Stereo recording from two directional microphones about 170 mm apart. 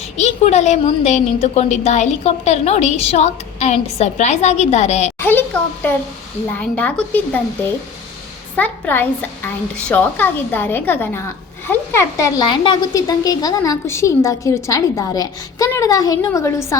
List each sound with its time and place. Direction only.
0.2 s a woman's voice: 40° left (ahead or behind)
5.2 s a woman's voice: 10° left (ahead or behind)
8.5 s a woman's voice: 10° left (ahead or behind)